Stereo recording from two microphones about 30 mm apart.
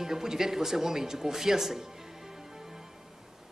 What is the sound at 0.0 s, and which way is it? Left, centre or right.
A woman's voice, centre.